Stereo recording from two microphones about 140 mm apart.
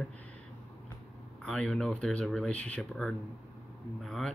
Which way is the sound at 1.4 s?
5° left (ahead or behind).